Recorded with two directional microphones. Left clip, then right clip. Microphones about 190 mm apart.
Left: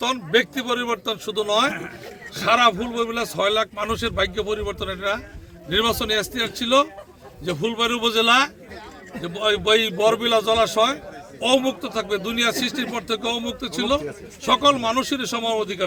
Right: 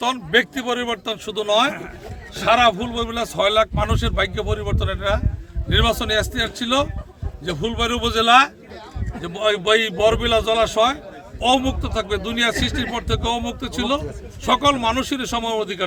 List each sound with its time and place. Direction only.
0.0 s a man's voice: 5° right (ahead or behind)
7.7 s a man's voice: 25° right (ahead or behind)
8.1 s a man's voice: 5° right (ahead or behind)